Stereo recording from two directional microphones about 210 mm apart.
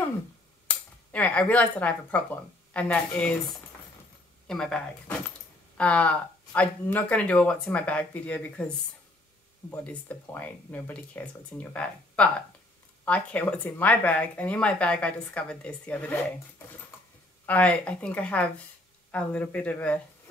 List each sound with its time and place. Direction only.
0.7 s speech: 5° left (ahead or behind)
17.5 s speech: 5° left (ahead or behind)